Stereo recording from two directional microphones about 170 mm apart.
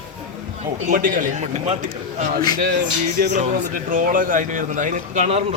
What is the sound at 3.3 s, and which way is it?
A man's voice, 45° right (ahead or behind).